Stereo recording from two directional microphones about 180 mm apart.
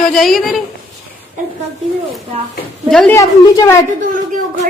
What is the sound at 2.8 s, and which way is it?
Speech, 5° left (ahead or behind).